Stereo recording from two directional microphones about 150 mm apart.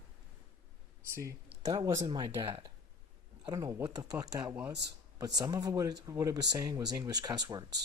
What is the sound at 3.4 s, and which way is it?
Speech, 25° right (ahead or behind).